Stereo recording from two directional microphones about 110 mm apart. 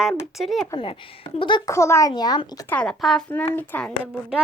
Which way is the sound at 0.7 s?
50° left (ahead or behind).